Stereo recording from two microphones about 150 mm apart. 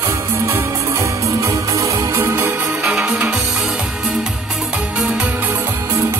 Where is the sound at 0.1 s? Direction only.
15° right (ahead or behind).